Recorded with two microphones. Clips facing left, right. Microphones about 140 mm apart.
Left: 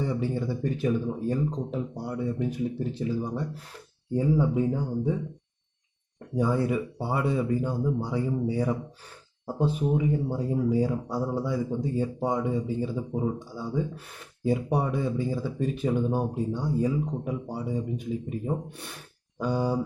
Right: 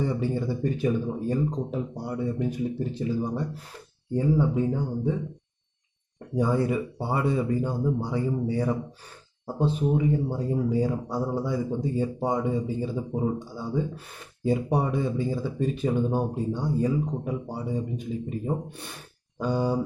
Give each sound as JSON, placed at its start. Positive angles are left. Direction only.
{"t": 0.0, "sound": "speech", "side_deg": 0}
{"t": 6.1, "sound": "speech", "side_deg": 0}